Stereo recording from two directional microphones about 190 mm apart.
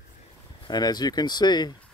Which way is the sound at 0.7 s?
20° left (ahead or behind).